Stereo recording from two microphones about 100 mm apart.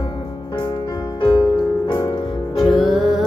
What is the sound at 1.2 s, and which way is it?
Music, 50° left (ahead or behind).